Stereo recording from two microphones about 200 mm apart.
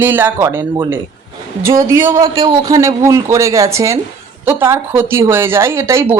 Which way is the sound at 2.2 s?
25° right (ahead or behind).